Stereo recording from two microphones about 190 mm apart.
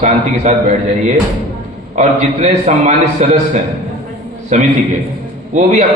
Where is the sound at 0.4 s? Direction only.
40° right (ahead or behind).